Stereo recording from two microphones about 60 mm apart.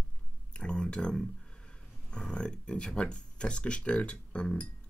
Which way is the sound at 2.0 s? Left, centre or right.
Centre.